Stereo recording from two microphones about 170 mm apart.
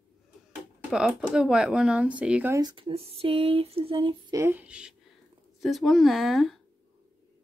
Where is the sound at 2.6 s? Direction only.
25° right (ahead or behind).